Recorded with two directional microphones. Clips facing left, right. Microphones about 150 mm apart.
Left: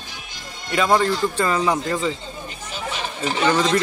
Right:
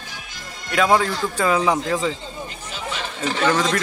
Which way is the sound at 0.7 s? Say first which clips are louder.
Even; centre (ahead or behind).